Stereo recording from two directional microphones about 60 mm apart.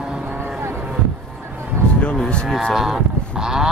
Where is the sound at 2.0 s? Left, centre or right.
Centre.